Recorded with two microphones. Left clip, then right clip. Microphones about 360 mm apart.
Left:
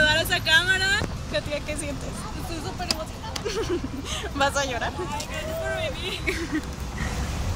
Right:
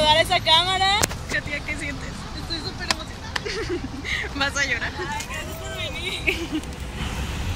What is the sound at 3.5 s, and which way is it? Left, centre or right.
Speech, centre.